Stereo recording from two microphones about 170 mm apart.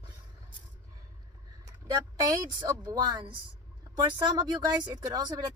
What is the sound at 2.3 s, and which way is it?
Speech, 25° right (ahead or behind).